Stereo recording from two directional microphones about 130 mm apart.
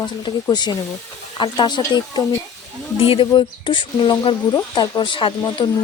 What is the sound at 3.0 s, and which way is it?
Speech, 45° left (ahead or behind).